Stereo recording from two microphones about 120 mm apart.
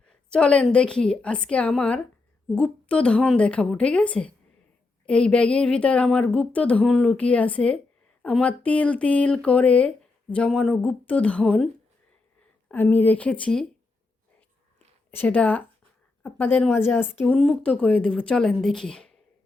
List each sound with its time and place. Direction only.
0.0 s a woman's voice: 10° left (ahead or behind)
12.7 s a woman's voice: 15° left (ahead or behind)
15.1 s a woman's voice: 15° left (ahead or behind)
17.3 s a woman's voice: 5° left (ahead or behind)